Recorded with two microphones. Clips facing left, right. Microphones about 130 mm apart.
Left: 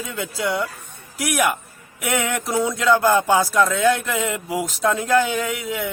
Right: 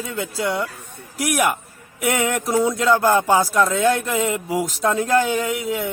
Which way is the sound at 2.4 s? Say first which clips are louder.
Right 3 dB; 5° right (ahead or behind).